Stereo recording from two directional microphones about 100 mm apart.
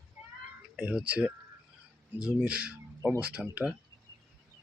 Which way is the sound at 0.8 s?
15° right (ahead or behind).